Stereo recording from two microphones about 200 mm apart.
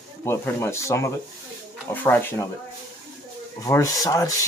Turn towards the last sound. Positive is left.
turn(degrees=15)  # may be behind; listen again after turning